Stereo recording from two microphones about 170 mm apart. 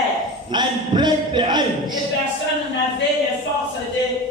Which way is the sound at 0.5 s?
25° right (ahead or behind).